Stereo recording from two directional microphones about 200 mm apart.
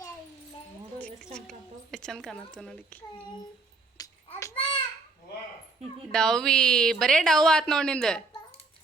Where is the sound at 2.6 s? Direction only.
5° left (ahead or behind).